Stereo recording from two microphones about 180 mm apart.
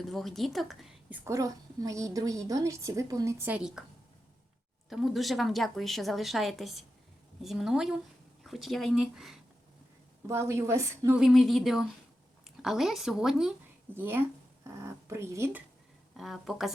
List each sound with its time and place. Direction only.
0.0 s a woman's voice: centre (ahead or behind)
1.2 s a woman's voice: 15° right (ahead or behind)
4.9 s a woman's voice: centre (ahead or behind)
10.2 s a woman's voice: 15° right (ahead or behind)
11.2 s a woman's voice: centre (ahead or behind)
16.1 s a woman's voice: centre (ahead or behind)